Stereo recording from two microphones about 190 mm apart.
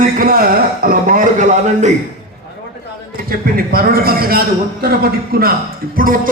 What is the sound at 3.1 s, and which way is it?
A man's voice, 50° right (ahead or behind).